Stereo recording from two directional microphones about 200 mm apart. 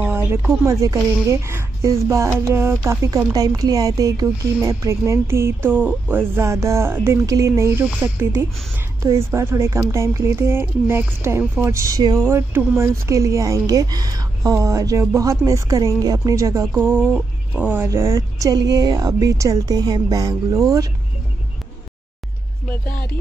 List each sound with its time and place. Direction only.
0.0 s speech: 10° right (ahead or behind)